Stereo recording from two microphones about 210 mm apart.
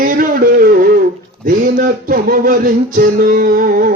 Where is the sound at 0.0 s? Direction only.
40° right (ahead or behind).